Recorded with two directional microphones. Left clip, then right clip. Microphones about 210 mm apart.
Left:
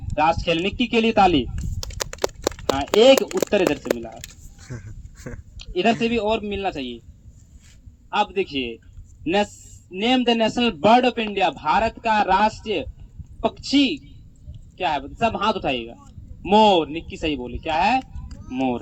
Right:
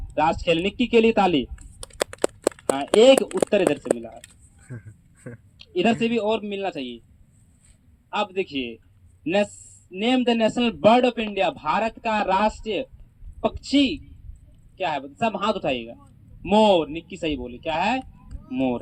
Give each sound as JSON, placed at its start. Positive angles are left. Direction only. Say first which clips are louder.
{"t": 0.2, "sound": "a man's voice", "louder": "left 1 dB", "side_deg": -50}
{"t": 1.5, "sound": "typing", "louder": "right 3 dB", "side_deg": 10}
{"t": 2.4, "sound": "a sound", "louder": "right 2 dB", "side_deg": 20}
{"t": 3.0, "sound": "a man's voice", "louder": "left 1 dB", "side_deg": -50}
{"t": 4.6, "sound": "dog", "louder": "left 4 dB", "side_deg": 5}
{"t": 5.5, "sound": "a man's voice", "louder": "left 2 dB", "side_deg": -50}
{"t": 8.1, "sound": "a man's voice", "louder": "left 4 dB", "side_deg": -50}